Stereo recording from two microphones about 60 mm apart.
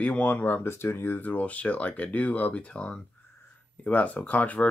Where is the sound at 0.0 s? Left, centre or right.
Left.